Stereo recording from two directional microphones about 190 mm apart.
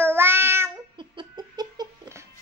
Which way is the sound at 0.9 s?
25° right (ahead or behind).